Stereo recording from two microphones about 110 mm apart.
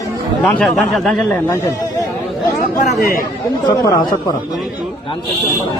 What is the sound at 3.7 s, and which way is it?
Speech, 35° left (ahead or behind).